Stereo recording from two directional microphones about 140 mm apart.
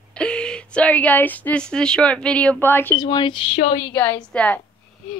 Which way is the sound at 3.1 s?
35° left (ahead or behind).